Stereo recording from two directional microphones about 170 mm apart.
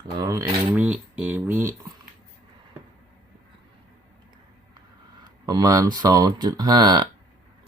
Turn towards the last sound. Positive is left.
turn(degrees=-25)  # may be behind; listen again after turning